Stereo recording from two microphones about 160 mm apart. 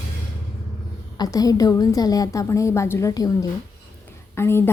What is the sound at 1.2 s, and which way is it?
A woman's voice, 20° left (ahead or behind).